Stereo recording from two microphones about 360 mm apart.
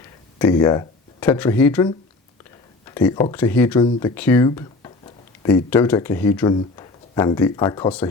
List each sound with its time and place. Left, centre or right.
0.3 s speech: centre